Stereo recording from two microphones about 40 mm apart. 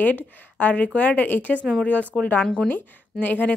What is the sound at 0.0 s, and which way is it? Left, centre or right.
Speech, left.